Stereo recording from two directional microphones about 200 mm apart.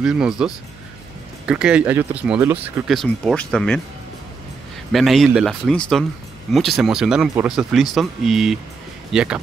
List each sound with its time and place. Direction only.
0.0 s speech: 5° right (ahead or behind)
2.9 s speech: centre (ahead or behind)
4.9 s speech: centre (ahead or behind)